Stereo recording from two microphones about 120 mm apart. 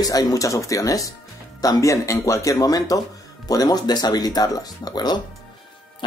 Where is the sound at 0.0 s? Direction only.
30° left (ahead or behind).